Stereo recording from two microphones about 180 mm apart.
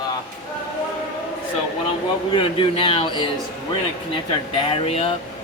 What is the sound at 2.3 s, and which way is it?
Speech, 30° left (ahead or behind).